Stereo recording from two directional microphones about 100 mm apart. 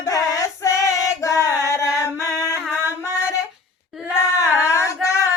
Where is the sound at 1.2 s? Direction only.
30° left (ahead or behind).